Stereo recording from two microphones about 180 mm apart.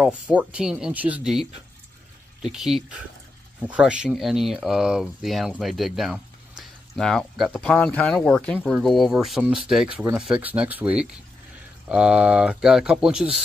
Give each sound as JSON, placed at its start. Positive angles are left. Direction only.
{"t": 0.0, "sound": "speech", "side_deg": -5}